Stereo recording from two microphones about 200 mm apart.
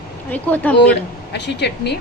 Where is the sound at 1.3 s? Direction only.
60° left (ahead or behind).